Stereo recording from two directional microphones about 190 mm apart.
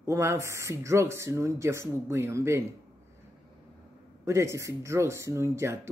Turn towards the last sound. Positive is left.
turn(degrees=-15)  # may be behind; listen again after turning